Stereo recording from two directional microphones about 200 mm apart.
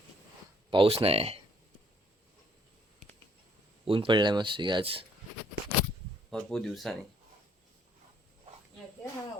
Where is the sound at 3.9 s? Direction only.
25° right (ahead or behind).